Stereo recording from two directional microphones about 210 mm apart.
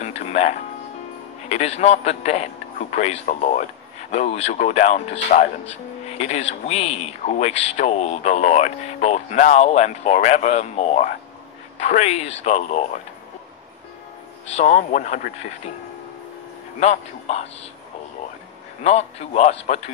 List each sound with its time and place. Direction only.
0.0 s music: 30° left (ahead or behind)
1.5 s speech: 30° left (ahead or behind)
14.4 s speech: 30° left (ahead or behind)
16.8 s speech: 30° left (ahead or behind)
18.8 s speech: 30° left (ahead or behind)